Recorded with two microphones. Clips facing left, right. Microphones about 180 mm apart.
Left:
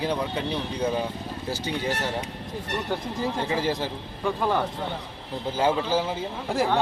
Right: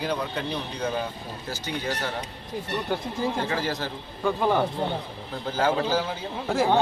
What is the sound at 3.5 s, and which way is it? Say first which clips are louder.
Speech: left 2 dB; 25° left (ahead or behind).